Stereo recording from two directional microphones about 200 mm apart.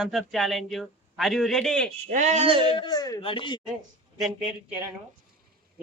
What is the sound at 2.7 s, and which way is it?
Speech, 20° left (ahead or behind).